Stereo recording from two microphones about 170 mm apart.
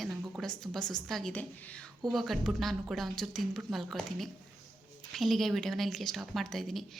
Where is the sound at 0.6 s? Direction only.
Centre (ahead or behind).